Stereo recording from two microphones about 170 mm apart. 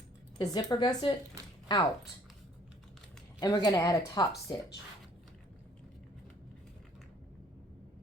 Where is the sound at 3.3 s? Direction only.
20° left (ahead or behind).